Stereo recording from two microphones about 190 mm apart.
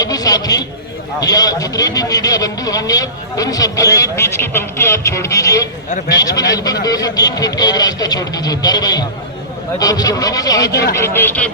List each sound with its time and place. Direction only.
0.0 s a man's voice: 20° left (ahead or behind)